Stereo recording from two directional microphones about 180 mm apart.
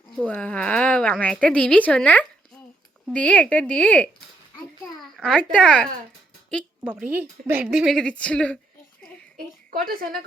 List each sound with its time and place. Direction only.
0.3 s a woman's voice: 5° left (ahead or behind)
5.1 s speech: 5° left (ahead or behind)
7.1 s speech: 10° right (ahead or behind); by 8.5 s 5° left (ahead or behind)
9.7 s a woman's voice: 55° right (ahead or behind)